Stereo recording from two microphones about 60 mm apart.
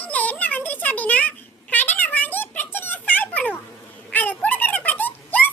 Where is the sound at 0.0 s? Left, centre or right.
Left.